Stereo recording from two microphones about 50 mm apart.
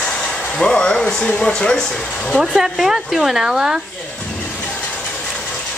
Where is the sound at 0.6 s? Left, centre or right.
Centre.